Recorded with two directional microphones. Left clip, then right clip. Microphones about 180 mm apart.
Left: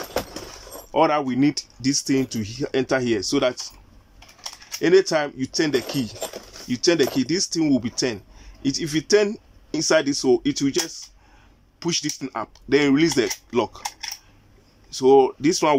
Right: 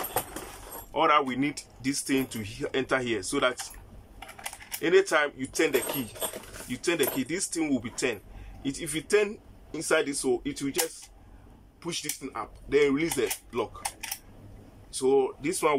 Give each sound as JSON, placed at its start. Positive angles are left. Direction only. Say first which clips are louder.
{"t": 0.9, "sound": "speech", "louder": "left 4 dB", "side_deg": 30}
{"t": 4.7, "sound": "speech", "louder": "left 5 dB", "side_deg": 30}
{"t": 11.8, "sound": "speech", "louder": "left 9 dB", "side_deg": 50}
{"t": 15.0, "sound": "speech", "louder": "left 9 dB", "side_deg": 45}